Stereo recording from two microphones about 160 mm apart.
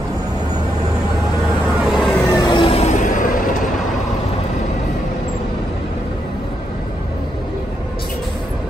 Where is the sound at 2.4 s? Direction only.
30° left (ahead or behind); by 3.6 s 55° left (ahead or behind).